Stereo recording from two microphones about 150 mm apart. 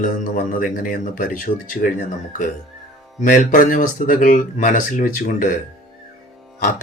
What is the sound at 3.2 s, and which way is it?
Speech, 60° left (ahead or behind).